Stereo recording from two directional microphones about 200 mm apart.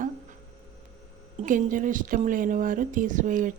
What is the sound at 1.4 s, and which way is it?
A woman's voice, 40° right (ahead or behind).